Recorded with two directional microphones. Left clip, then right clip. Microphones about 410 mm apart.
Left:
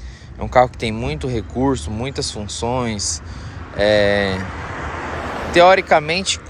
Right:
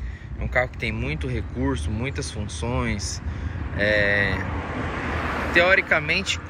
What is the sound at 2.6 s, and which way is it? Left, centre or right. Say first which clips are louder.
Speech: left 7 dB; centre.